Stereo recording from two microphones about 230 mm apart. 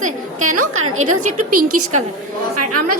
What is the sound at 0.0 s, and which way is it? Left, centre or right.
A woman's voice, right.